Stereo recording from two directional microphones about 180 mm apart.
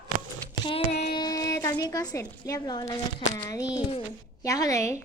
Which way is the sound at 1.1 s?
20° left (ahead or behind).